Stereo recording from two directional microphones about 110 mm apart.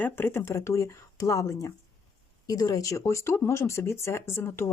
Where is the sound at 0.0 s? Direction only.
20° left (ahead or behind).